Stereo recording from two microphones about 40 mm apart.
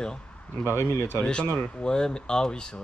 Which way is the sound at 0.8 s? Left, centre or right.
Left.